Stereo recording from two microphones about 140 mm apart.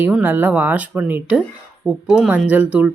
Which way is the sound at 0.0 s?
15° right (ahead or behind).